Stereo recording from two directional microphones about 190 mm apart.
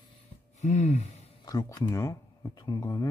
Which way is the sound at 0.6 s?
40° left (ahead or behind).